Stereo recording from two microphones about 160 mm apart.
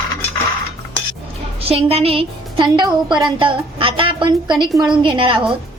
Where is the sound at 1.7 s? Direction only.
40° right (ahead or behind).